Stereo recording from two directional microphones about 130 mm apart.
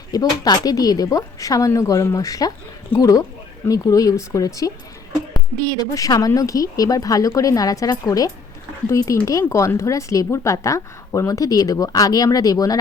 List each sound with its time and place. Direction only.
0.1 s speech: 30° left (ahead or behind)
5.8 s speech: 30° left (ahead or behind)